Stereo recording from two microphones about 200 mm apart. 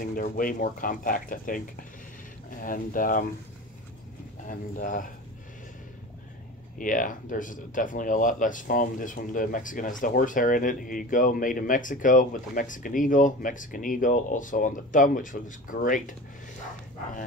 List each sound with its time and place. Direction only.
0.0 s speech: 45° left (ahead or behind)
4.5 s speech: 40° left (ahead or behind)
6.8 s speech: 40° left (ahead or behind)